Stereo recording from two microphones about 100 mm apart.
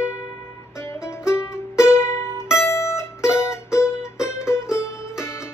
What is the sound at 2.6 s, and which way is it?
Music, 30° left (ahead or behind).